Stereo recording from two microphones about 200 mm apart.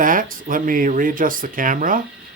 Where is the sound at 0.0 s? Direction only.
45° right (ahead or behind).